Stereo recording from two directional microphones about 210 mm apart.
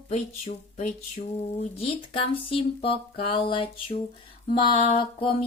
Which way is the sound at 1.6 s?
25° left (ahead or behind).